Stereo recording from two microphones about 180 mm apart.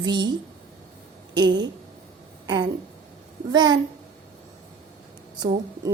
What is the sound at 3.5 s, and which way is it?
Speech, 25° right (ahead or behind).